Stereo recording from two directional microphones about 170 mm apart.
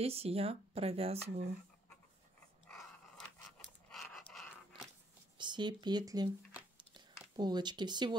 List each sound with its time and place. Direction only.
0.0 s speech: 35° right (ahead or behind)
2.7 s pant: 5° left (ahead or behind)
5.4 s speech: 25° right (ahead or behind)
7.3 s speech: 25° right (ahead or behind)